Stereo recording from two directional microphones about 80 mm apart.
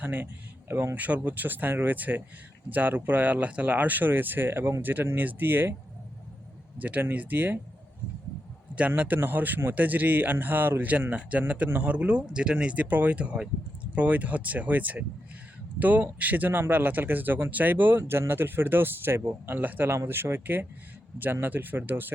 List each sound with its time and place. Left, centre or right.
0.0 s speech: right
6.7 s speech: right
8.9 s speech: right